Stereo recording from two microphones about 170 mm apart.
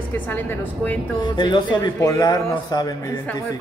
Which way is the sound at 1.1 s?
25° left (ahead or behind).